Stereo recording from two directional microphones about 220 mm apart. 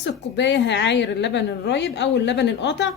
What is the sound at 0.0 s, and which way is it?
A woman's voice, 50° left (ahead or behind).